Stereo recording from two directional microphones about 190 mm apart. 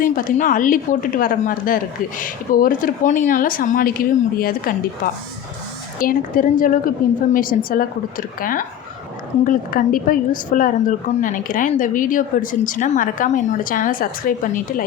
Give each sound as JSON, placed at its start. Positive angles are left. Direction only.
{"t": 0.0, "sound": "a woman's voice", "side_deg": 45}
{"t": 6.0, "sound": "a woman's voice", "side_deg": 45}